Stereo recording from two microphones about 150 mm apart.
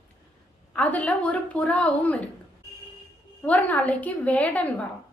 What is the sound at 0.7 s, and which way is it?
A woman's voice, 10° left (ahead or behind).